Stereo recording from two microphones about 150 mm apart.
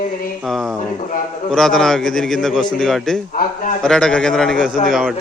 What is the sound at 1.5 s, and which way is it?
A man's voice, 5° left (ahead or behind).